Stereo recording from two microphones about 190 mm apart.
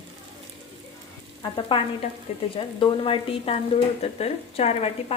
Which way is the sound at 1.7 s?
25° left (ahead or behind).